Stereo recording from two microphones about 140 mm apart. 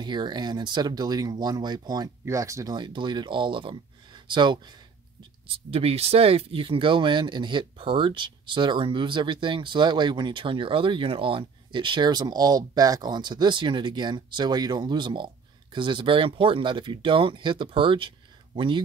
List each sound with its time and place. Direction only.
0.0 s speech: 30° right (ahead or behind)
5.7 s speech: 45° right (ahead or behind)